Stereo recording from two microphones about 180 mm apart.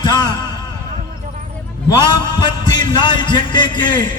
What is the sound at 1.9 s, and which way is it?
A man's voice, 20° left (ahead or behind).